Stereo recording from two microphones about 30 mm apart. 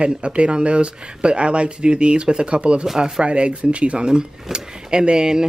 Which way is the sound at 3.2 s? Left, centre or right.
Right.